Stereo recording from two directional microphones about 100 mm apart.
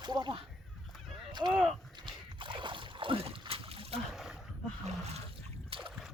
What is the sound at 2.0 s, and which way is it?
Splash, 55° right (ahead or behind).